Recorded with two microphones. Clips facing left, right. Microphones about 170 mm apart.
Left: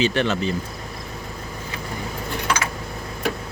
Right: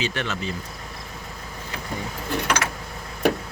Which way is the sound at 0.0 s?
30° left (ahead or behind).